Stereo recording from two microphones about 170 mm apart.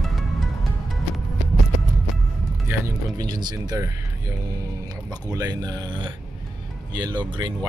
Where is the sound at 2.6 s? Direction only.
20° right (ahead or behind).